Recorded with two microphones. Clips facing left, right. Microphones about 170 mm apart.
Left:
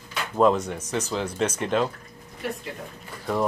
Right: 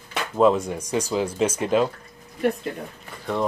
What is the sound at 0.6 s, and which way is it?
Speech, 10° right (ahead or behind).